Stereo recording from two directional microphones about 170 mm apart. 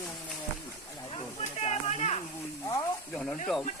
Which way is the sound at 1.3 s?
40° left (ahead or behind).